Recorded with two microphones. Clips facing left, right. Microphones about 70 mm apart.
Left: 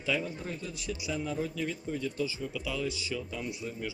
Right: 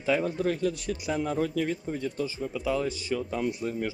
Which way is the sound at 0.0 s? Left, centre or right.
Right.